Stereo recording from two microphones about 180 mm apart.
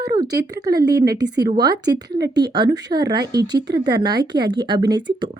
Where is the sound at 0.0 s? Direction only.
20° right (ahead or behind).